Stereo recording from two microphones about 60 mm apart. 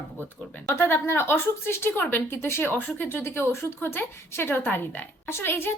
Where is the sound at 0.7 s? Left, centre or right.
Left.